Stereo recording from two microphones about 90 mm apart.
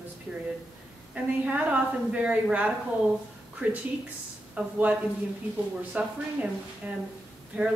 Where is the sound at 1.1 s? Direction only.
15° right (ahead or behind).